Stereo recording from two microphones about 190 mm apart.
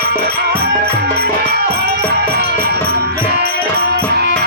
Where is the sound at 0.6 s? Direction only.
55° right (ahead or behind).